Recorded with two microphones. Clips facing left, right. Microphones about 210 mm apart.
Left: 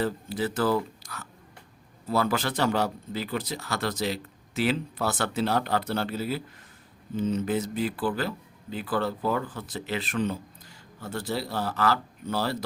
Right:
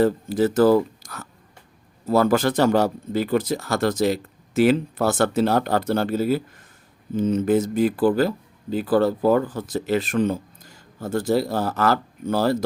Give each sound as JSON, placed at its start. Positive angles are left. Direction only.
{"t": 0.0, "sound": "speech", "side_deg": -45}